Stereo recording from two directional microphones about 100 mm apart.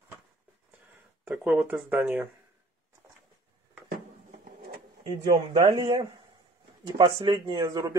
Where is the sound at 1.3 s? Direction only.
5° right (ahead or behind).